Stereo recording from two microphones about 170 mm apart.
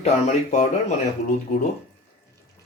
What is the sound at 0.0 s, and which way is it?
Speech, 40° left (ahead or behind).